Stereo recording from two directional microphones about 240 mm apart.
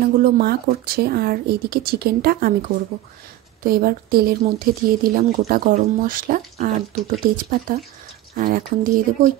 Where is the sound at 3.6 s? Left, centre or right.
Right.